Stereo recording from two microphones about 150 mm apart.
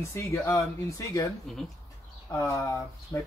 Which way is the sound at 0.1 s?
15° left (ahead or behind).